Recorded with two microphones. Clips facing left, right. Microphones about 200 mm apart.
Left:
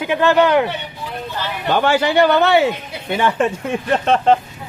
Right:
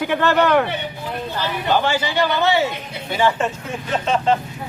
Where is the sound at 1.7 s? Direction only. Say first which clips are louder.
Left 6 dB; 60° left (ahead or behind).